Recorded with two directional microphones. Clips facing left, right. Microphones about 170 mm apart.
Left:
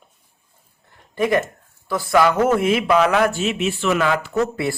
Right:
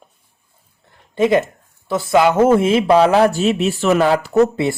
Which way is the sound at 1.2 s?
25° right (ahead or behind).